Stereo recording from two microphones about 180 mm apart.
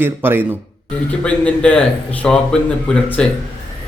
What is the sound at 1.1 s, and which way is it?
Speech, 5° left (ahead or behind).